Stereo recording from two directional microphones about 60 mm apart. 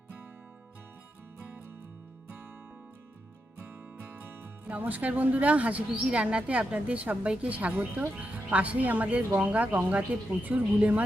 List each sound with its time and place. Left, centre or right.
3.7 s music: right
5.9 s a woman's voice: centre